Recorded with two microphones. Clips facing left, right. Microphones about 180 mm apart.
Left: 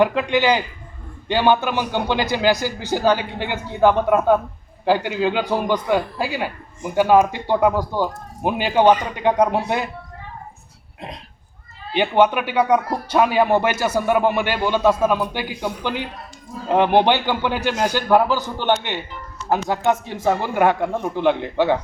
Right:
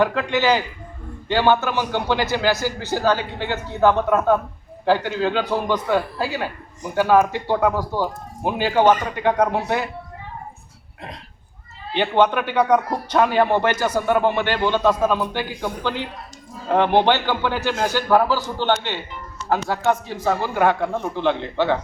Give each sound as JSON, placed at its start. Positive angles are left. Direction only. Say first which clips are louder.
{"t": 0.0, "sound": "speech", "louder": "left 2 dB", "side_deg": 15}
{"t": 11.9, "sound": "speech", "louder": "left 1 dB", "side_deg": 10}